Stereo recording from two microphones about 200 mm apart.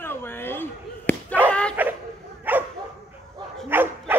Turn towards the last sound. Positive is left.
turn(degrees=-10)  # may be behind; listen again after turning